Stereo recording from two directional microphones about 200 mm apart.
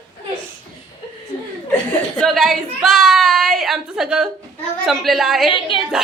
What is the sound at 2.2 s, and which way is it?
A woman's voice, centre (ahead or behind).